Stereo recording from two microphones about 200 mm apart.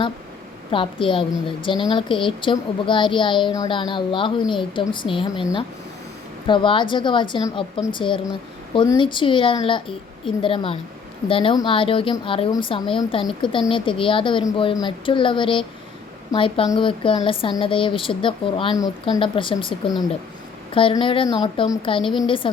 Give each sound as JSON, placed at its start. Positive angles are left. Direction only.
{"t": 0.7, "sound": "a woman's voice", "side_deg": 25}
{"t": 6.5, "sound": "a woman's voice", "side_deg": 25}
{"t": 20.7, "sound": "a woman's voice", "side_deg": 25}